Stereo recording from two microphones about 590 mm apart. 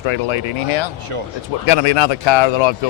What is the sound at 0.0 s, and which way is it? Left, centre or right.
Speech, left.